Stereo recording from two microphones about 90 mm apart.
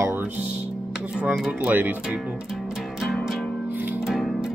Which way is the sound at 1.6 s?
20° right (ahead or behind).